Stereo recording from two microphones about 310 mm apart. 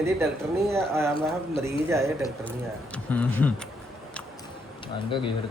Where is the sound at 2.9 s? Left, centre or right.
Centre.